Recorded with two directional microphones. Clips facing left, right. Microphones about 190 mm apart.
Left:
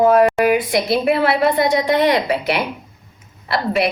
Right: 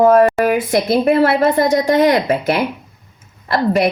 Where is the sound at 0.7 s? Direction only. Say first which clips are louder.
Right 3 dB; 45° right (ahead or behind).